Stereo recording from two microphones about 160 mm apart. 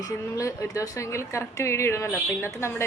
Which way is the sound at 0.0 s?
20° left (ahead or behind).